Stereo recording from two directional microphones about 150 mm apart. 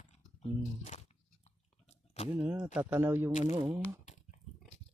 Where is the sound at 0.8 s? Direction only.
50° left (ahead or behind).